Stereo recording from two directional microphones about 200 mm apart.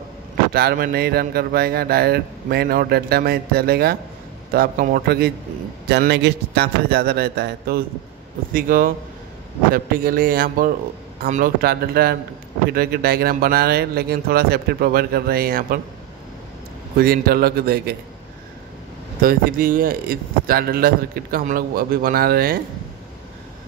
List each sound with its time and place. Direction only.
0.5 s speech: 50° right (ahead or behind)
16.9 s speech: 50° right (ahead or behind)
19.2 s speech: 45° right (ahead or behind)